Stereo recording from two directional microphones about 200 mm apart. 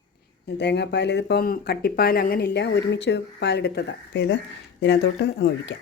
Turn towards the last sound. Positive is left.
turn(degrees=60)  # may be behind; listen again after turning